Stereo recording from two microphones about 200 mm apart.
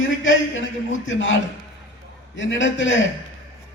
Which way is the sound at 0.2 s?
70° left (ahead or behind).